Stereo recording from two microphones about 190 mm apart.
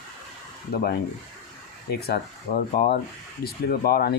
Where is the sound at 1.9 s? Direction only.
55° left (ahead or behind).